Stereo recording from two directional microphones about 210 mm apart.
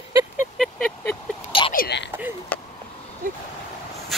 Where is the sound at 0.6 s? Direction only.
Centre (ahead or behind).